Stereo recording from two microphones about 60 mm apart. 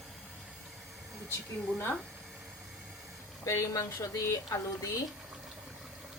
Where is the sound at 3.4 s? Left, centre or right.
Left.